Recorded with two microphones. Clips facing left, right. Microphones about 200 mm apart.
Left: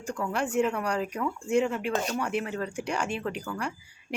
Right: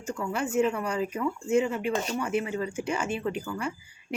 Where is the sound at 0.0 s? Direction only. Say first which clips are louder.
Even; centre (ahead or behind).